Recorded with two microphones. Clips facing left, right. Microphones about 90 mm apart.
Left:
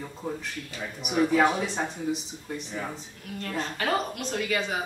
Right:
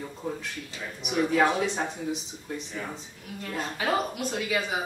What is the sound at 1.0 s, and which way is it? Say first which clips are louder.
Speech: left 2 dB; 5° left (ahead or behind).